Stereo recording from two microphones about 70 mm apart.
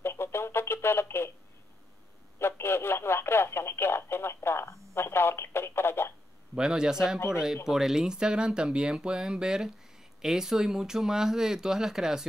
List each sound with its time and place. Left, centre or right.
0.0 s radio: left
2.3 s speech: left
6.5 s speech: centre